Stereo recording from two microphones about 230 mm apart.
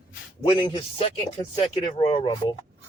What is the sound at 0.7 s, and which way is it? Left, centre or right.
Speech, left.